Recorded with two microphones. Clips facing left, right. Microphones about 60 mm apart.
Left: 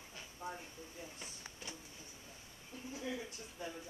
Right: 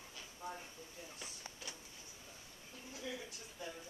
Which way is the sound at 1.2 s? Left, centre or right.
Left.